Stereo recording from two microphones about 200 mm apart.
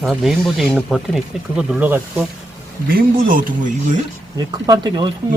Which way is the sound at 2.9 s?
45° right (ahead or behind).